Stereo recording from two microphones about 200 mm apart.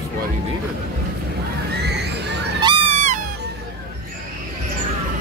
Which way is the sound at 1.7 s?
55° right (ahead or behind).